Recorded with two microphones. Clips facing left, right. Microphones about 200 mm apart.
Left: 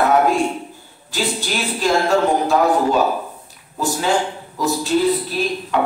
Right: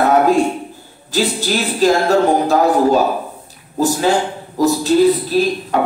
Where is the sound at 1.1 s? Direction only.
40° right (ahead or behind).